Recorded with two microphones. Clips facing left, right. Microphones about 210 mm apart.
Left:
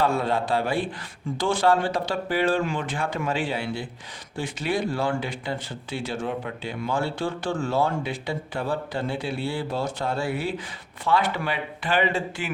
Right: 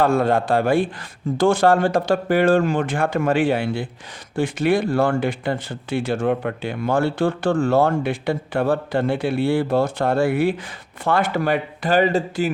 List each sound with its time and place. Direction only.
0.0 s speech: 50° right (ahead or behind)